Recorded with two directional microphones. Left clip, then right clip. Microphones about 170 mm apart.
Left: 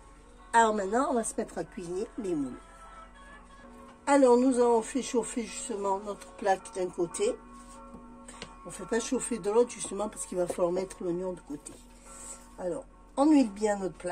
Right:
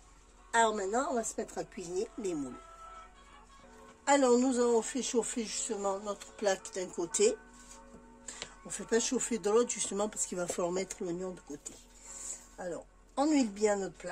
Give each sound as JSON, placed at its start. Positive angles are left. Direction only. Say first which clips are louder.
{"t": 0.5, "sound": "a woman's voice", "louder": "left 4 dB", "side_deg": -10}
{"t": 4.0, "sound": "speech", "louder": "left 4 dB", "side_deg": -45}
{"t": 8.6, "sound": "speech", "louder": "even", "side_deg": -60}
{"t": 13.1, "sound": "a woman's voice", "louder": "left 6 dB", "side_deg": -40}